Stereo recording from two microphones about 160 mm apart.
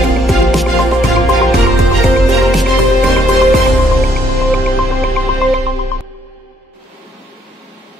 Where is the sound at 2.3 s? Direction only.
Centre (ahead or behind).